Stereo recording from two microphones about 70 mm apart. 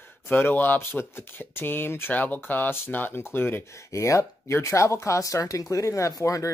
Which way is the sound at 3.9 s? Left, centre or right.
Left.